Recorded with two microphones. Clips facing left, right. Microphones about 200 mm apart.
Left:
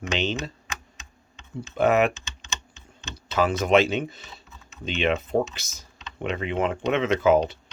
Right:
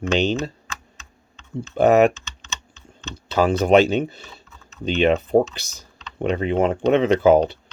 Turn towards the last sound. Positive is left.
turn(degrees=-35)  # may be behind; listen again after turning